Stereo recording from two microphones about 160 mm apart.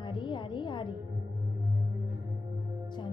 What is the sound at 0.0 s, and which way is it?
Music, 30° left (ahead or behind).